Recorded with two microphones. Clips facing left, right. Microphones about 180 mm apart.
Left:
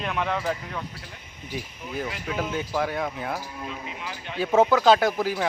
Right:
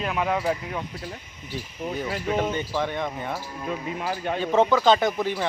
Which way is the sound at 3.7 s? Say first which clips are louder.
Right 7 dB; 50° right (ahead or behind).